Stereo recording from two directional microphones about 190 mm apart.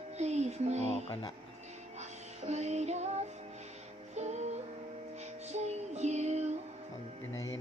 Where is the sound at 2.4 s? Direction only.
35° right (ahead or behind).